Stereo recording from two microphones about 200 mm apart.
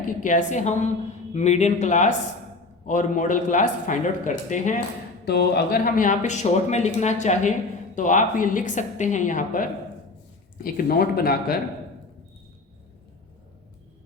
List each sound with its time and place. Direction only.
0.2 s speech: 40° left (ahead or behind)
5.2 s speech: 55° left (ahead or behind)